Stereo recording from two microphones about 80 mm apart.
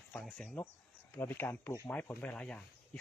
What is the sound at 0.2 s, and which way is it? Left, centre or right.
Speech, centre.